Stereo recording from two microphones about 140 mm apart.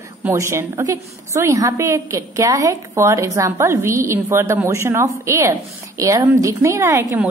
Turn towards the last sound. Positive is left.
turn(degrees=-20)  # may be behind; listen again after turning